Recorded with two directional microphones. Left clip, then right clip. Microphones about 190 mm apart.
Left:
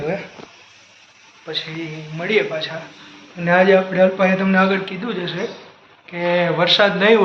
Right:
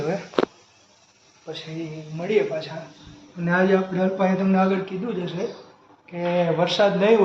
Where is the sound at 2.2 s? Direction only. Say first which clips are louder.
Left 3 dB; centre (ahead or behind).